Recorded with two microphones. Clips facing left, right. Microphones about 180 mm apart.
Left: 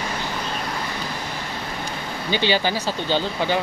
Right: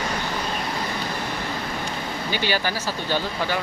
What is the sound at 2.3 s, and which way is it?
Speech, 25° left (ahead or behind).